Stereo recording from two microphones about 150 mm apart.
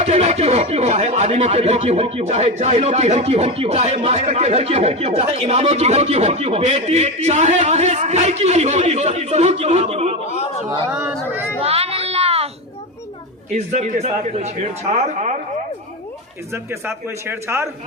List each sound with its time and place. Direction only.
0.0 s speech: 45° right (ahead or behind)
10.9 s a man's voice: 5° right (ahead or behind)
11.6 s a sound: 40° right (ahead or behind)
13.5 s speech: 55° right (ahead or behind)
16.5 s a man's voice: 15° right (ahead or behind)